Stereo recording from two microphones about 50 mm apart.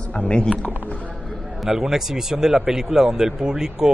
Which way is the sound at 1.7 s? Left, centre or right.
Centre.